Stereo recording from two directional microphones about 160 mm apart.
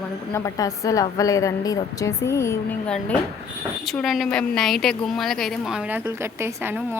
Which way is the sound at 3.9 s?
Centre (ahead or behind).